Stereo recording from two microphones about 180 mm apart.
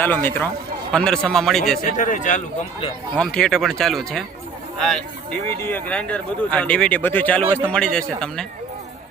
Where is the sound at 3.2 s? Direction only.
5° left (ahead or behind).